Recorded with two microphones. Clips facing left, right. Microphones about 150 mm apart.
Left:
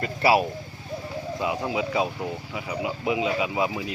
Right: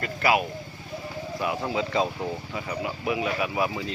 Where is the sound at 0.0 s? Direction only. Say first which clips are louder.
Left 3 dB; 30° left (ahead or behind).